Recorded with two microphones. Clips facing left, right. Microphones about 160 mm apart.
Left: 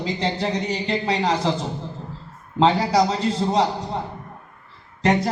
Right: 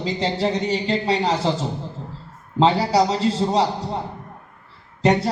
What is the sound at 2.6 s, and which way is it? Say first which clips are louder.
A man's voice: right 1 dB; 30° right (ahead or behind).